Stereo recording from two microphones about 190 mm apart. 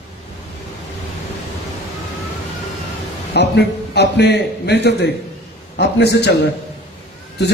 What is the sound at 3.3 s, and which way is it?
A man's voice, 60° left (ahead or behind).